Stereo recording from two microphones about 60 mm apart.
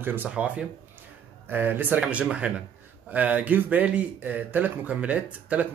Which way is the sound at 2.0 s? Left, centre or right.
Centre.